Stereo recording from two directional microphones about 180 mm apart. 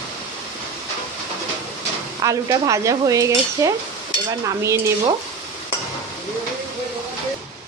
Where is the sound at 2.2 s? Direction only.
20° right (ahead or behind).